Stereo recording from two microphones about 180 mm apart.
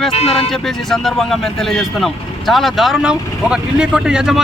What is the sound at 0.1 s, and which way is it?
Speech, 35° left (ahead or behind).